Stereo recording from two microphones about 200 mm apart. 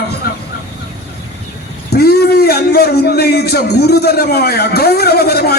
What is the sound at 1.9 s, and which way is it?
A man's voice, 55° left (ahead or behind).